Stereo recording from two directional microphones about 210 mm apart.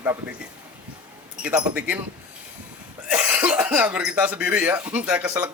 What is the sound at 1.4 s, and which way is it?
Speech, 5° right (ahead or behind).